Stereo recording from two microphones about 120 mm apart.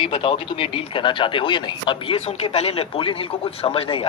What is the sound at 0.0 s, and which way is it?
Speech, 45° left (ahead or behind).